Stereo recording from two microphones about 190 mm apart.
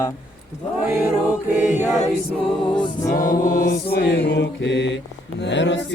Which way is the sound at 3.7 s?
60° left (ahead or behind).